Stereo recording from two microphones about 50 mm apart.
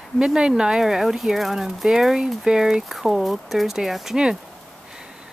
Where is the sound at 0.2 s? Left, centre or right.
Centre.